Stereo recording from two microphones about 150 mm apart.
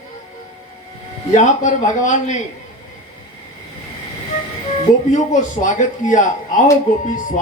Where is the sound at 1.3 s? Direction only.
55° left (ahead or behind).